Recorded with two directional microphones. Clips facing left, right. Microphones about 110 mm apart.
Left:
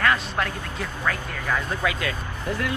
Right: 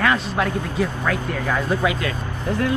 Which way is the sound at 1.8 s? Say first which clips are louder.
Right 4 dB; 30° right (ahead or behind).